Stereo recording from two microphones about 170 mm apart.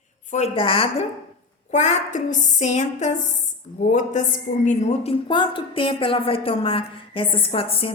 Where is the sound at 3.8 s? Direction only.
45° left (ahead or behind).